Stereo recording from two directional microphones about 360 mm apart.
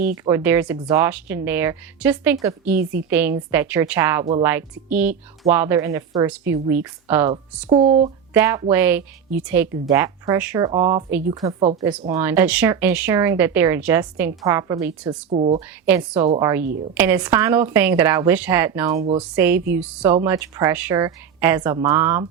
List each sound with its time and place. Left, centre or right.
0.3 s a woman's voice: centre
15.9 s a woman's voice: centre